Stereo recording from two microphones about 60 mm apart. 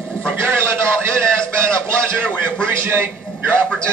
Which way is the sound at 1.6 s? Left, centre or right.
Right.